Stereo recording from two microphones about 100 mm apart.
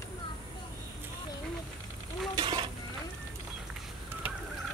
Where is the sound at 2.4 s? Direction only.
60° right (ahead or behind).